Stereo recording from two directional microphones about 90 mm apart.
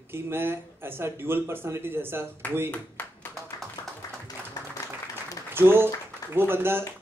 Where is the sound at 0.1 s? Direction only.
25° right (ahead or behind).